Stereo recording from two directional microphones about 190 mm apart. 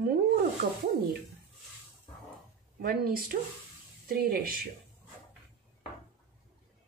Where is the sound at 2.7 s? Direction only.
50° right (ahead or behind).